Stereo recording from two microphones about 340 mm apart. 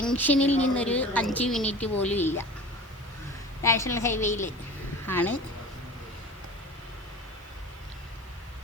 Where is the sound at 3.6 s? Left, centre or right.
Centre.